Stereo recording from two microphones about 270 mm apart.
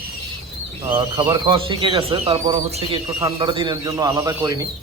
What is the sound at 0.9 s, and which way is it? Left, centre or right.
A man's voice, centre.